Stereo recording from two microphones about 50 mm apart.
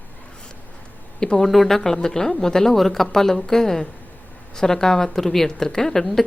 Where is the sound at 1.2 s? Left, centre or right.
Centre.